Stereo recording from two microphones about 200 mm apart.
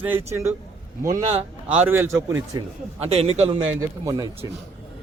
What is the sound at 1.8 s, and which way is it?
Speech, 10° right (ahead or behind).